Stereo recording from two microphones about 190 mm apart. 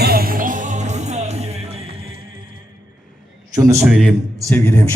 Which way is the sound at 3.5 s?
15° right (ahead or behind).